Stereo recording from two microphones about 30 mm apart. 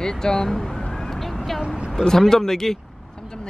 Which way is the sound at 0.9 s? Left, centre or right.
Centre.